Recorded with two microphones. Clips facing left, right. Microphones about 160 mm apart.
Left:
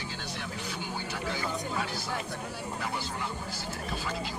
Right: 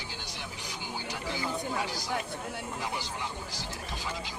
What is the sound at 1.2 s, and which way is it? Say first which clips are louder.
Speech: right 1 dB; 15° right (ahead or behind).